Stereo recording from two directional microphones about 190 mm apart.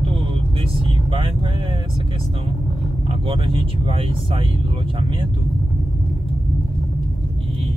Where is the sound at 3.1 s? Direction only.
25° right (ahead or behind).